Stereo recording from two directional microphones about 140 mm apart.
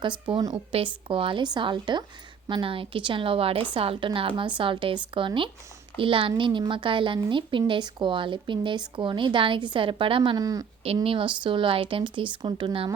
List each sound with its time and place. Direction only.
0.0 s speech: 35° right (ahead or behind)
10.3 s speech: 25° right (ahead or behind)
11.0 s speech: 40° right (ahead or behind)